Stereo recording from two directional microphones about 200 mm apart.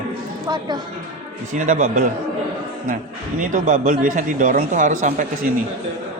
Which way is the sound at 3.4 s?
40° right (ahead or behind).